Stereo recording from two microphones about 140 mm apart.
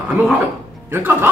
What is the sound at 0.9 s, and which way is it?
Speech, 15° right (ahead or behind).